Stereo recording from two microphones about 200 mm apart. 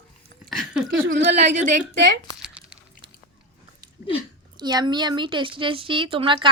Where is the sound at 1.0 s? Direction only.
65° right (ahead or behind).